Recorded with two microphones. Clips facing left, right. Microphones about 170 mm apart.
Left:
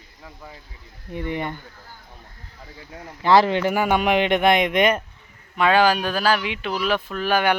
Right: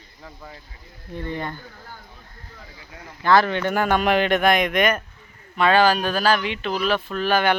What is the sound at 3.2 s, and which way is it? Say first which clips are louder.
Speech: left 2 dB; 30° left (ahead or behind).